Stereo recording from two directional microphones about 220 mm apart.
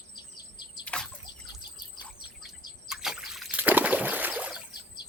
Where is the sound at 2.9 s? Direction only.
Centre (ahead or behind).